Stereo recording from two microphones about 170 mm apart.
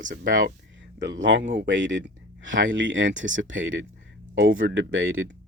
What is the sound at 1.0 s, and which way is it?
Speech, 90° right.